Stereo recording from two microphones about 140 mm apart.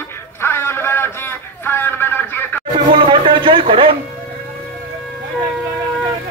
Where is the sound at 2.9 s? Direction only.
35° right (ahead or behind).